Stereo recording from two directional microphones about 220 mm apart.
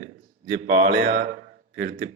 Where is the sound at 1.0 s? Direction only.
30° right (ahead or behind).